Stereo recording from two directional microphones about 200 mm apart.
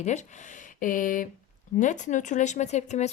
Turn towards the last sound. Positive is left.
turn(degrees=35)  # may be behind; listen again after turning